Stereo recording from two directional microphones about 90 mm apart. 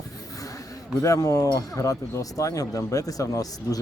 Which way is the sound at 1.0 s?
40° left (ahead or behind).